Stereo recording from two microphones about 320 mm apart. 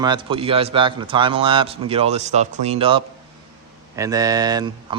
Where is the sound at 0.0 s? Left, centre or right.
Centre.